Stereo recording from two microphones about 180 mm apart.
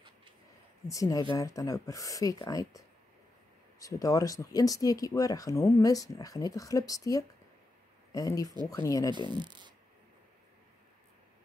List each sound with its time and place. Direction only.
0.8 s speech: 20° left (ahead or behind)
3.8 s speech: 20° left (ahead or behind)
9.3 s speech: 25° right (ahead or behind)